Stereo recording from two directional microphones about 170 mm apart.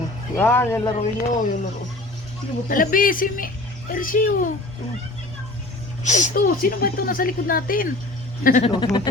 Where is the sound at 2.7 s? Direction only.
55° left (ahead or behind).